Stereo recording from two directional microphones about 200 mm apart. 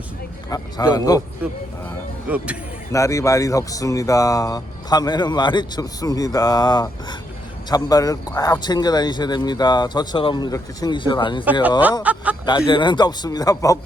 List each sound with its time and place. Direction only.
0.5 s speech: 20° left (ahead or behind)
2.3 s speech: 5° right (ahead or behind)
2.9 s speech: 15° left (ahead or behind)
12.0 s speech: 5° right (ahead or behind)
12.5 s speech: 20° left (ahead or behind)